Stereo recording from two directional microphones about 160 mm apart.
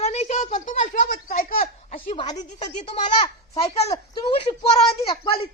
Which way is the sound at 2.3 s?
45° left (ahead or behind).